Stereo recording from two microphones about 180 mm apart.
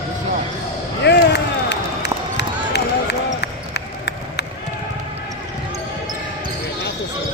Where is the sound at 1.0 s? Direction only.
70° left (ahead or behind).